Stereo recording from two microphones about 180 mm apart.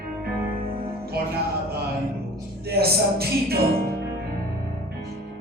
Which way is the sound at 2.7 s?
60° right (ahead or behind).